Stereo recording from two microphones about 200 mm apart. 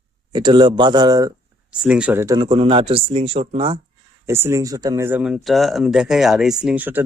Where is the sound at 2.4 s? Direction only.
25° right (ahead or behind).